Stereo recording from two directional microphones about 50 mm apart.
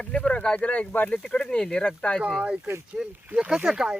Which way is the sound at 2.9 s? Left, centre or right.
Centre.